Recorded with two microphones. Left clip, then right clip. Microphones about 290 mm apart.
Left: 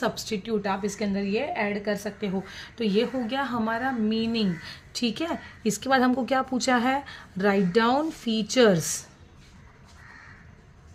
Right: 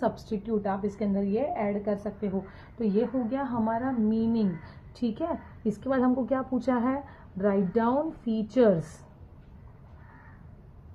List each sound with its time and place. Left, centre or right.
0.1 s a woman's voice: left